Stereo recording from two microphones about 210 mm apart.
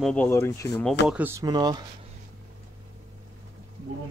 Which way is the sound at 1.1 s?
10° right (ahead or behind).